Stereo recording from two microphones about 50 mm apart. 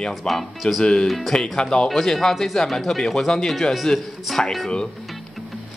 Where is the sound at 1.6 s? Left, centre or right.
Centre.